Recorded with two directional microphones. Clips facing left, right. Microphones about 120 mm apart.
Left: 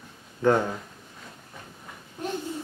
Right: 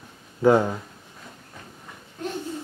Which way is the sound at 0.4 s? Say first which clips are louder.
Right 4 dB; 10° right (ahead or behind).